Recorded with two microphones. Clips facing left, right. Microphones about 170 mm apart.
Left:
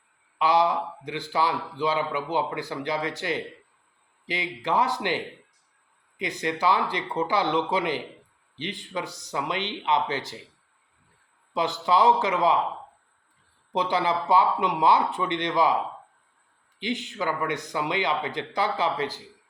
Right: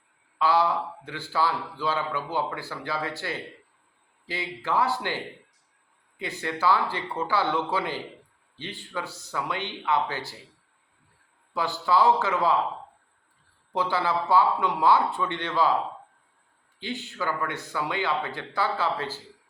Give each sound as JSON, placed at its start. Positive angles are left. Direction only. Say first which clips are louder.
{"t": 0.3, "sound": "a man's voice", "louder": "left 1 dB", "side_deg": 15}
{"t": 11.5, "sound": "a man's voice", "louder": "left 1 dB", "side_deg": 20}
{"t": 13.7, "sound": "a man's voice", "louder": "left 1 dB", "side_deg": 20}
{"t": 16.8, "sound": "a man's voice", "louder": "left 3 dB", "side_deg": 20}